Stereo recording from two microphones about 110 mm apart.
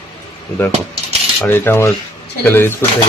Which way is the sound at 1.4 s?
20° left (ahead or behind).